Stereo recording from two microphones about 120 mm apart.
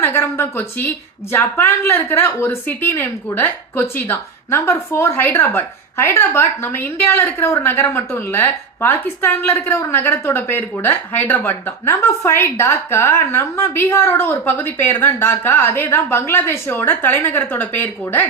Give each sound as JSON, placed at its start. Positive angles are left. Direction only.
{"t": 0.0, "sound": "a woman's voice", "side_deg": 20}